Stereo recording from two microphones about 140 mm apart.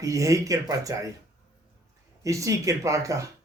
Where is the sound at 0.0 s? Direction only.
20° right (ahead or behind).